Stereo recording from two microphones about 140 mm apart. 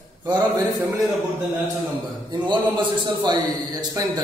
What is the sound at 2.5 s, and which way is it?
A man's voice, 30° right (ahead or behind).